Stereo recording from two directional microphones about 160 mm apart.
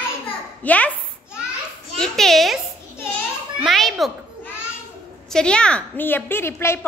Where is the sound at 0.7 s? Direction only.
10° left (ahead or behind).